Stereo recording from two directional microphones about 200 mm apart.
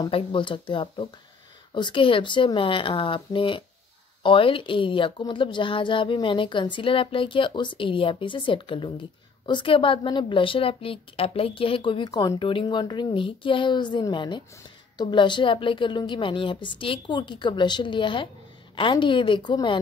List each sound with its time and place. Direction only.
0.0 s a woman's voice: 25° left (ahead or behind)